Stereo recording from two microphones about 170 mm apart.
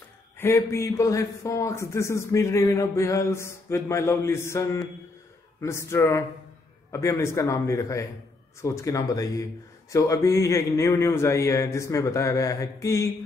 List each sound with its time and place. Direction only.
0.4 s a man's voice: 15° left (ahead or behind)